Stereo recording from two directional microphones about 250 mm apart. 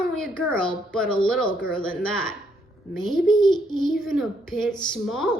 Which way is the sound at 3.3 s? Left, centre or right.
Centre.